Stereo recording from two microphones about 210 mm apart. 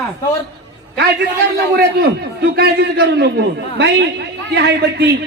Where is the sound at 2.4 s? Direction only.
50° right (ahead or behind).